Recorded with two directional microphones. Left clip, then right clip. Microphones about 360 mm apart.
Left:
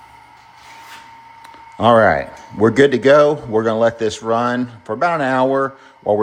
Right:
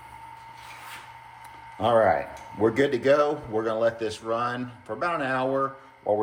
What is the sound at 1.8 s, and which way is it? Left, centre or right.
Speech, left.